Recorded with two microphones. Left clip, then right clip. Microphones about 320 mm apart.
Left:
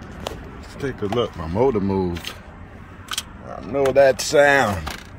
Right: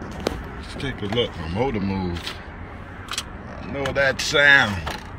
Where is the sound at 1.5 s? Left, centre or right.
Centre.